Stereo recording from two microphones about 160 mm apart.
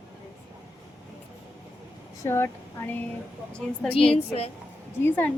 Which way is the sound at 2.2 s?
15° left (ahead or behind).